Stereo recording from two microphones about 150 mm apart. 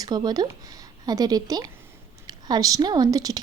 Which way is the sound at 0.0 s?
25° right (ahead or behind).